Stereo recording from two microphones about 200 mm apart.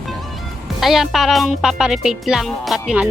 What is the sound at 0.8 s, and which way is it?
Speech, centre (ahead or behind).